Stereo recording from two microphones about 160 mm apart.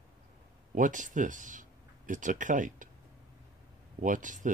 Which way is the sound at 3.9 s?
55° right (ahead or behind).